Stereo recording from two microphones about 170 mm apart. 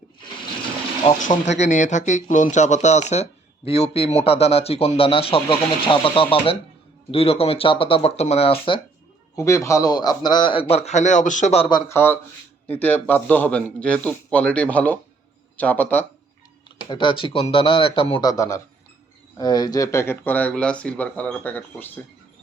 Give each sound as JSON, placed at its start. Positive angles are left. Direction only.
{"t": 1.2, "sound": "a man's voice", "side_deg": 45}
{"t": 9.3, "sound": "a man's voice", "side_deg": 15}
{"t": 11.7, "sound": "speech", "side_deg": 15}
{"t": 16.9, "sound": "a man's voice", "side_deg": 30}